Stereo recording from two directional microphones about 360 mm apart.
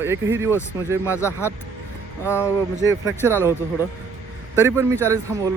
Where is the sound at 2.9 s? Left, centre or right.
Centre.